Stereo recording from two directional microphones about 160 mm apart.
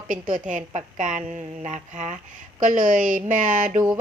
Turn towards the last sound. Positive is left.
turn(degrees=-55)  # may be behind; listen again after turning